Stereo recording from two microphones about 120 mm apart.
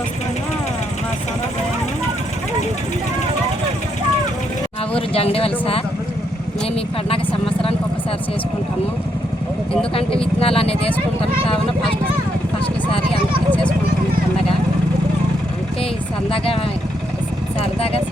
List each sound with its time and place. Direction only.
4.9 s speech: 50° left (ahead or behind)
7.1 s speech: 50° left (ahead or behind)
9.9 s speech: 50° left (ahead or behind)
13.5 s vehicle: 10° left (ahead or behind)
16.3 s speech: 50° left (ahead or behind)
17.7 s speech: 55° left (ahead or behind)